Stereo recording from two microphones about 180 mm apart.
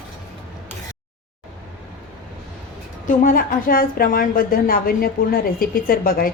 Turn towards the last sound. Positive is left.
turn(degrees=55)  # may be behind; listen again after turning